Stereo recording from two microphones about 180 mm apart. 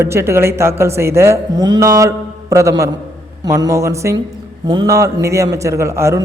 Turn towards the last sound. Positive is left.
turn(degrees=-15)  # may be behind; listen again after turning